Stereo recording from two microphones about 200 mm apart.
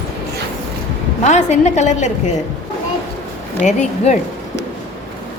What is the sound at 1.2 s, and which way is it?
A woman's voice, 35° left (ahead or behind).